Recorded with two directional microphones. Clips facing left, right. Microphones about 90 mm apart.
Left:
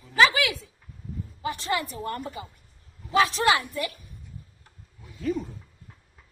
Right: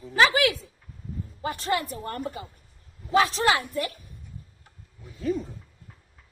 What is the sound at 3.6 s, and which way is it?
Speech, 45° right (ahead or behind).